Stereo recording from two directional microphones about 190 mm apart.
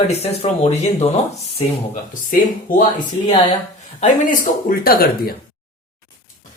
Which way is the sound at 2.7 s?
50° left (ahead or behind).